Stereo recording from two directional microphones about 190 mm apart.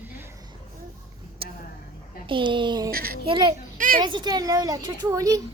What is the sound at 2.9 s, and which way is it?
Speech, 50° right (ahead or behind).